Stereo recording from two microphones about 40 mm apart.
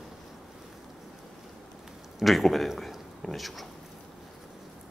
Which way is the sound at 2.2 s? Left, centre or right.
Centre.